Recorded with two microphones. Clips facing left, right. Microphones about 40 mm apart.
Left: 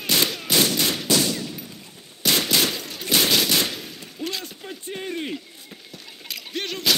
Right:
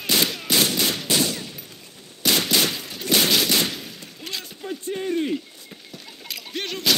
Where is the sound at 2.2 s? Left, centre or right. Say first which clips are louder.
Even; centre.